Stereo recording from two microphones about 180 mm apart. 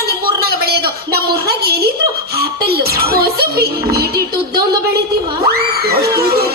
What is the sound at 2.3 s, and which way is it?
Music, 60° right (ahead or behind).